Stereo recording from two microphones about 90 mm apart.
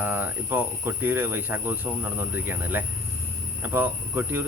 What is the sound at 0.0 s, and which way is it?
Speech, 20° right (ahead or behind).